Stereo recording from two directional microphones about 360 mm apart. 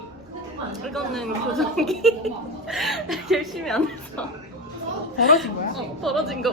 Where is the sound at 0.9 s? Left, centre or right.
Centre.